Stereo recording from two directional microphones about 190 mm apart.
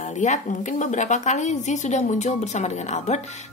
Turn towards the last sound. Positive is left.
turn(degrees=35)  # may be behind; listen again after turning